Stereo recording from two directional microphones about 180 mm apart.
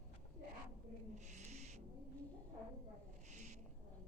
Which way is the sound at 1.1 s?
40° right (ahead or behind).